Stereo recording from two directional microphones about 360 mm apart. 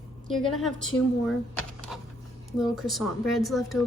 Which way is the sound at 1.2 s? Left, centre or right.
Centre.